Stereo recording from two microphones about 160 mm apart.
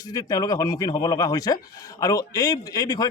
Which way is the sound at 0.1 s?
25° left (ahead or behind).